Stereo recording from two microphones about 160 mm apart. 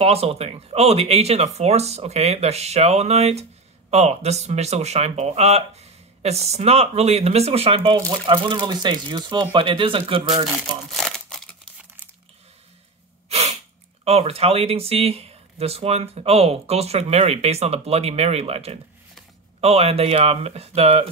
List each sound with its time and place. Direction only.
0.0 s speech: 40° right (ahead or behind)
10.5 s crumpling: 5° right (ahead or behind)
13.3 s sneeze: 45° right (ahead or behind)
14.0 s speech: 40° right (ahead or behind)